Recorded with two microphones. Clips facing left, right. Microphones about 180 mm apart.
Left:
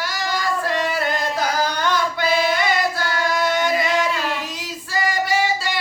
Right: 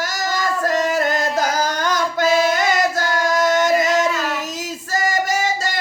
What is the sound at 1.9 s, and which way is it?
Female singing, 45° right (ahead or behind).